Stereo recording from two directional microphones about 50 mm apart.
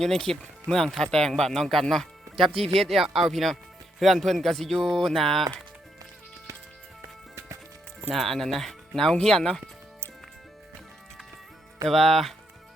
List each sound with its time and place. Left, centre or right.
0.0 s speech: centre
7.3 s music: right
8.1 s speech: centre
11.9 s speech: centre